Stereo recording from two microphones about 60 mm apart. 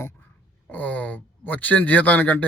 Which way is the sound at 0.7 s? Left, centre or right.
Left.